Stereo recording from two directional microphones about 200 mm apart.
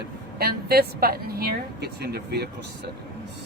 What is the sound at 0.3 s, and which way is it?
A woman's voice, 50° right (ahead or behind).